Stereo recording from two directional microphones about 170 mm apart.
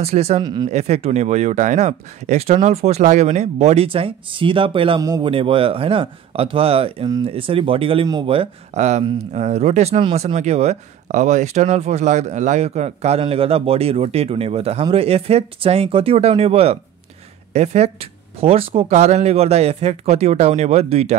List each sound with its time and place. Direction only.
0.0 s speech: 40° right (ahead or behind)
0.4 s a man's voice: 25° right (ahead or behind)
0.7 s speech: 40° right (ahead or behind)
5.0 s a man's voice: 20° right (ahead or behind)
5.3 s speech: 30° right (ahead or behind)